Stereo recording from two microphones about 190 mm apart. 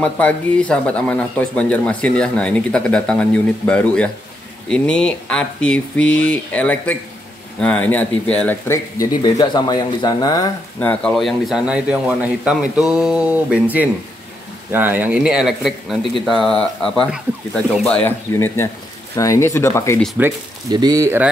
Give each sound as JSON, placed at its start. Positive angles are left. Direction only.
{"t": 0.0, "sound": "speech", "side_deg": 5}
{"t": 9.2, "sound": "speech", "side_deg": 25}
{"t": 10.8, "sound": "speech", "side_deg": 5}
{"t": 20.2, "sound": "speech", "side_deg": -10}
{"t": 20.7, "sound": "speech", "side_deg": -20}